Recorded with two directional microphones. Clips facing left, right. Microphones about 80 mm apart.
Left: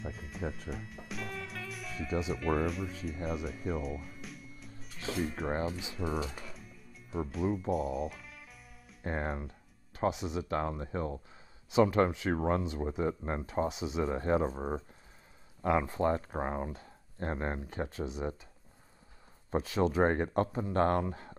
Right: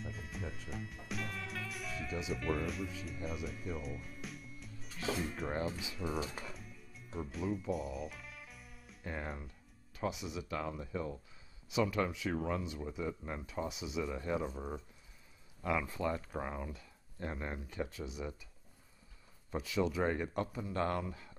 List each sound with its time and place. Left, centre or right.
0.0 s music: centre
3.3 s speech: centre
5.7 s speech: left
6.3 s music: centre
9.0 s speech: left
19.5 s speech: left